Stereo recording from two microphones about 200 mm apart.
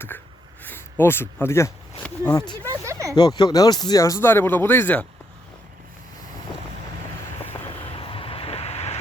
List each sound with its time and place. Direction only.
0.6 s speech: 10° left (ahead or behind)
2.8 s speech: 15° right (ahead or behind)
3.2 s speech: 20° left (ahead or behind)
7.9 s vehicle: 25° left (ahead or behind)